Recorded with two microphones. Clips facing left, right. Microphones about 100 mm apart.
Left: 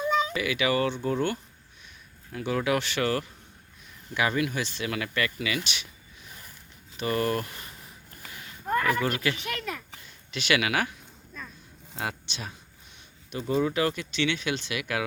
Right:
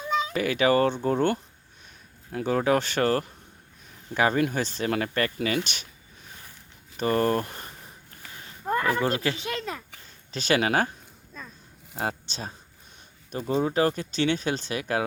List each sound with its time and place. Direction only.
0.3 s speech: 40° right (ahead or behind)
6.9 s speech: 40° right (ahead or behind)
7.4 s speech: 45° right (ahead or behind)
8.3 s a sound: 35° right (ahead or behind)
10.3 s speech: 40° right (ahead or behind)
11.9 s speech: 35° right (ahead or behind)
13.6 s speech: 35° right (ahead or behind)